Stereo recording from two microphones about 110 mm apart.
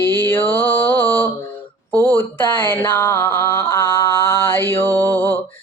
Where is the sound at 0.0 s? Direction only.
20° left (ahead or behind).